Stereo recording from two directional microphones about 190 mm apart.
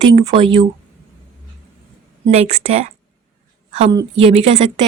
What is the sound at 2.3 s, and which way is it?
A woman's voice, 35° right (ahead or behind).